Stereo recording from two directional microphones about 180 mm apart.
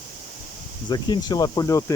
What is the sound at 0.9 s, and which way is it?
Speech, 25° left (ahead or behind).